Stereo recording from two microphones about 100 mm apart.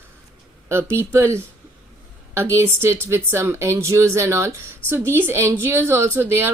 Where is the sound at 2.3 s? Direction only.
25° right (ahead or behind).